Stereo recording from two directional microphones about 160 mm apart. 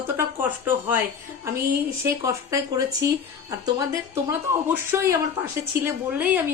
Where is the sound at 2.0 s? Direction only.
20° right (ahead or behind).